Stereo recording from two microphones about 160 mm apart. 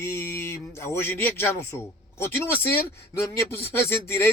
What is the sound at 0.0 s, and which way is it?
A man's voice, 15° left (ahead or behind).